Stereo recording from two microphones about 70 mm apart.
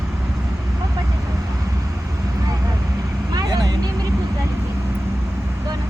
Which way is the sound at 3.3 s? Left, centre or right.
Right.